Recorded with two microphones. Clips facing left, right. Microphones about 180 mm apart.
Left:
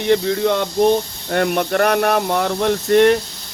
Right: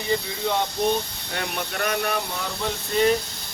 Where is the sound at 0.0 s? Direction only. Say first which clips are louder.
Left 10 dB; 70° left (ahead or behind).